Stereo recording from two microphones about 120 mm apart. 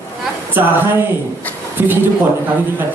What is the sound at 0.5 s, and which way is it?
Speech, 20° right (ahead or behind).